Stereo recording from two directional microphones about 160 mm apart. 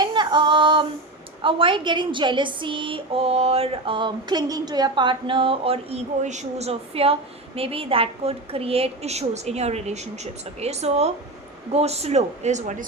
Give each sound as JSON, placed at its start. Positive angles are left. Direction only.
{"t": 0.0, "sound": "female singing", "side_deg": -30}
{"t": 1.4, "sound": "a woman's voice", "side_deg": -35}